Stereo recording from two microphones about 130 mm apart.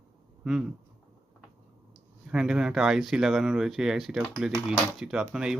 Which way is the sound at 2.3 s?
5° right (ahead or behind).